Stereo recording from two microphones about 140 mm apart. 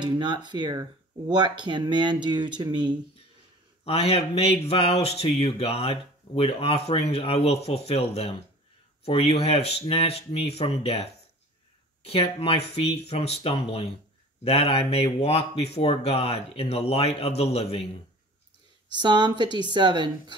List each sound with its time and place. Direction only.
0.0 s speech: 30° right (ahead or behind)
3.8 s speech: 45° left (ahead or behind)
12.1 s speech: 45° left (ahead or behind)
18.9 s speech: 30° right (ahead or behind)